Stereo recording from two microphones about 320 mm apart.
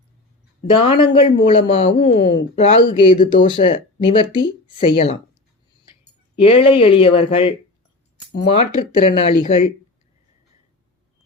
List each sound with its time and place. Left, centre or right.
0.8 s speech: centre
6.3 s speech: centre